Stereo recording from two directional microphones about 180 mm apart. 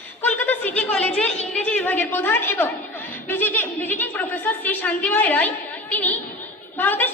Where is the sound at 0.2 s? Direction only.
10° left (ahead or behind).